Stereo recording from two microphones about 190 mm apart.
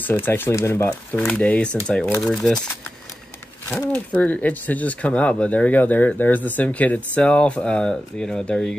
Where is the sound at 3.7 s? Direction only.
10° left (ahead or behind).